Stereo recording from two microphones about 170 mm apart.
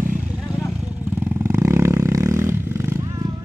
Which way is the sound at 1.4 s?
15° right (ahead or behind).